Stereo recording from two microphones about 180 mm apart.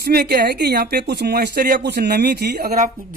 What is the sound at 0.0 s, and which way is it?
Speech, 60° right (ahead or behind).